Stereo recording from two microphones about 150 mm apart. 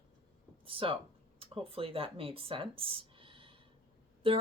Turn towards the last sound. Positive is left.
turn(degrees=-35)  # may be behind; listen again after turning